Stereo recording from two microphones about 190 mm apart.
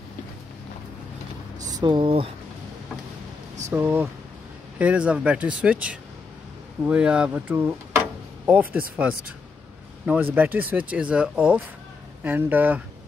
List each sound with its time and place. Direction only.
1.8 s speech: 25° right (ahead or behind)
3.7 s speech: 10° right (ahead or behind)
10.3 s speech: 10° right (ahead or behind)